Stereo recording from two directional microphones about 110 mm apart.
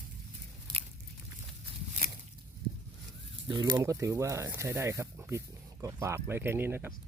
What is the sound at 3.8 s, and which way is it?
Speech, 30° right (ahead or behind).